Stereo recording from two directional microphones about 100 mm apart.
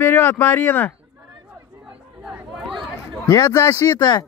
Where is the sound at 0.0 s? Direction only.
25° left (ahead or behind).